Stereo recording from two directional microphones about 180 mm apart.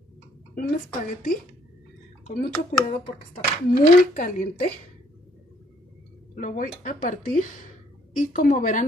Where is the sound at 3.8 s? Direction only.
45° left (ahead or behind).